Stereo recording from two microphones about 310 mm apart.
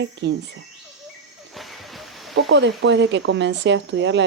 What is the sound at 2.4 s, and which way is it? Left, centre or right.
Speech, right.